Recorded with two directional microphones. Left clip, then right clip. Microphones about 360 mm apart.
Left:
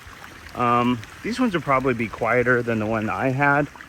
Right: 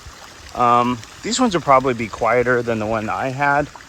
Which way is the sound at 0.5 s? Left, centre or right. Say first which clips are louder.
Right 5 dB; centre.